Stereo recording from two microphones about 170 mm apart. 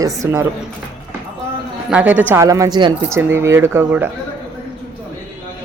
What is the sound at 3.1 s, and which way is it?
Speech, 15° right (ahead or behind).